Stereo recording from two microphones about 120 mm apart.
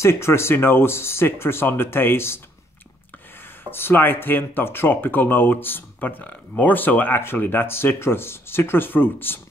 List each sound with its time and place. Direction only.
0.0 s speech: 20° left (ahead or behind)
3.7 s speech: 20° left (ahead or behind)